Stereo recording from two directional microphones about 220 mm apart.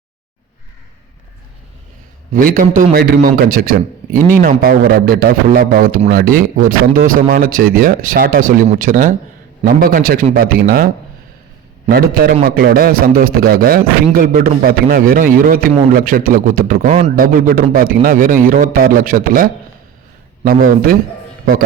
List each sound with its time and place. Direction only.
2.3 s a man's voice: 40° right (ahead or behind)
11.9 s a man's voice: 45° right (ahead or behind)